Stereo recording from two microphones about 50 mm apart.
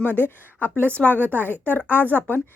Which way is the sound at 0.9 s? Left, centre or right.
Left.